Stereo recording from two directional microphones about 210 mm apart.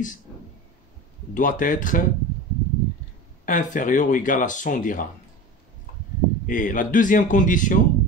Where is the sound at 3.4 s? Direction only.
40° left (ahead or behind).